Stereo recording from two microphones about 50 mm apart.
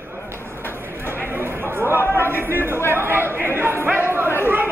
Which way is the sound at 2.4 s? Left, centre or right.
Right.